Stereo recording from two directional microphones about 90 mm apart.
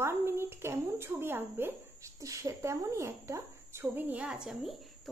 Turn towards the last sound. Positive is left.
turn(degrees=-5)  # may be behind; listen again after turning